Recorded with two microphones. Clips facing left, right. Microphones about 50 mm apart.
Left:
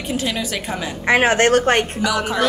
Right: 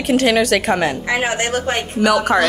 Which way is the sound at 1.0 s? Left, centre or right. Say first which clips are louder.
Left 4 dB; left.